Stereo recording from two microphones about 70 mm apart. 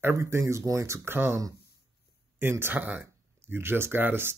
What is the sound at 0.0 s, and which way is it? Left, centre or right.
Speech, right.